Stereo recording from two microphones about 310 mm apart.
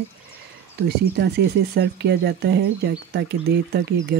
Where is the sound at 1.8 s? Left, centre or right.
Right.